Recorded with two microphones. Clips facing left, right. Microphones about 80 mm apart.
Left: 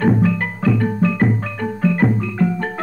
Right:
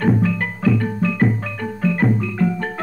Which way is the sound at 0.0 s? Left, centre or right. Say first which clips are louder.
Left 2 dB; left.